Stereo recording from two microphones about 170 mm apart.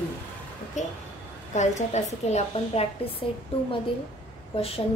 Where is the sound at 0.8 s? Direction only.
45° left (ahead or behind).